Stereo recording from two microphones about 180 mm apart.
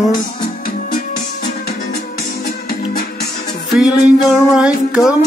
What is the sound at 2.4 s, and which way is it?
Music, 55° left (ahead or behind).